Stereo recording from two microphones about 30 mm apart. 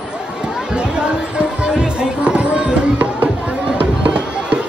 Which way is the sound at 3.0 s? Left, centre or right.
Right.